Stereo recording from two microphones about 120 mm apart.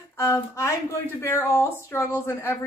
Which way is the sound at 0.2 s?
20° left (ahead or behind).